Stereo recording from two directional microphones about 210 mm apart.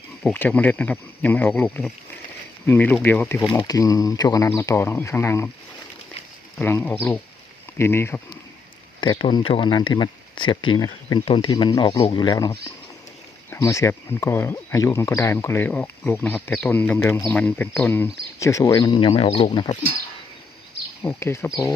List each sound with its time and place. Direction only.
0.2 s speech: 5° left (ahead or behind)
6.6 s speech: 10° left (ahead or behind)
9.0 s speech: 25° left (ahead or behind)
21.0 s speech: 10° left (ahead or behind)